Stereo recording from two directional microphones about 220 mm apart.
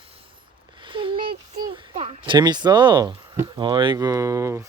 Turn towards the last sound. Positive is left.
turn(degrees=-15)  # may be behind; listen again after turning